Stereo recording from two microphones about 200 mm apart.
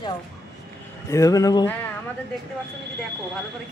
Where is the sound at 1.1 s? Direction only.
15° left (ahead or behind).